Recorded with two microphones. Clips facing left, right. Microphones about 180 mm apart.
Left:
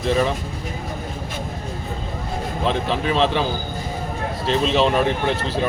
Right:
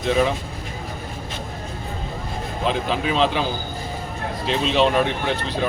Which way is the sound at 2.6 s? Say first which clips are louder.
Left 1 dB; centre (ahead or behind).